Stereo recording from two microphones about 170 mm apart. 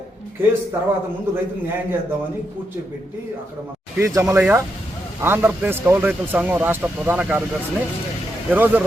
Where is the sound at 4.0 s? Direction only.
15° right (ahead or behind).